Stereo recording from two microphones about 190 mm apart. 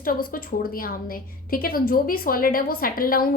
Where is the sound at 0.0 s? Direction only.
50° left (ahead or behind).